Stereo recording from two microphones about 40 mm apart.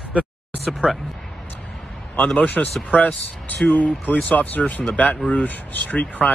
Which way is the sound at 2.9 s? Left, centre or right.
Left.